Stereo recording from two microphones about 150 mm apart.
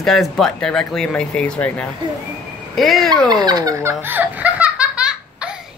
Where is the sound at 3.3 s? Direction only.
25° right (ahead or behind).